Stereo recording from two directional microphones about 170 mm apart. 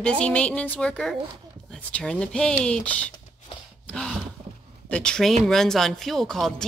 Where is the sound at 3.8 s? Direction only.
5° left (ahead or behind).